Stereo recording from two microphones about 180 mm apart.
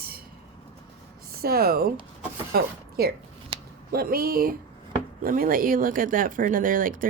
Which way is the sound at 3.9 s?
55° right (ahead or behind).